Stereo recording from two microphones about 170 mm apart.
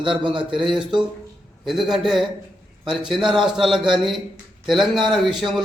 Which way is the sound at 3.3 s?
Centre (ahead or behind).